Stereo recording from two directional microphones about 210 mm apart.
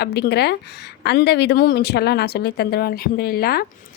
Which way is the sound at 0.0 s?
50° left (ahead or behind).